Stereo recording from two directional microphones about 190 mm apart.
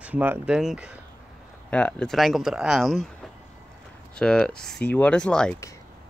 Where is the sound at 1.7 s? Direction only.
5° left (ahead or behind).